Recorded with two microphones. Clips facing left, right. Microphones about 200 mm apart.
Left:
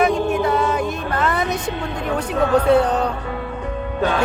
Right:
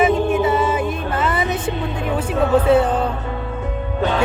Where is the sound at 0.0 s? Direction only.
5° right (ahead or behind).